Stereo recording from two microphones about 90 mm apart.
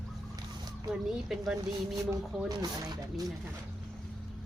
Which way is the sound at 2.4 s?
45° right (ahead or behind).